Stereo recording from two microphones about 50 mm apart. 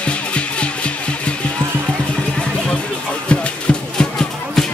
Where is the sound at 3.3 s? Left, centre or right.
Centre.